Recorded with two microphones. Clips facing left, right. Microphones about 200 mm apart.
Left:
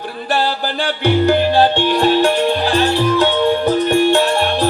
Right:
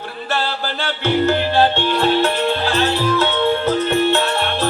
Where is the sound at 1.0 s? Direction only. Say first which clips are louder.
Left 3 dB; 15° left (ahead or behind).